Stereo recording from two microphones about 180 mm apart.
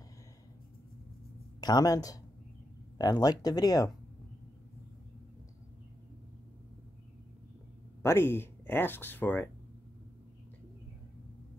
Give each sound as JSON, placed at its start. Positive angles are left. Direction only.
{"t": 1.6, "sound": "speech", "side_deg": 20}
{"t": 8.0, "sound": "speech", "side_deg": 15}